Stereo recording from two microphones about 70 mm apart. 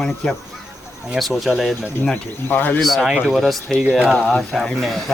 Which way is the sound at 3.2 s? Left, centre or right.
Centre.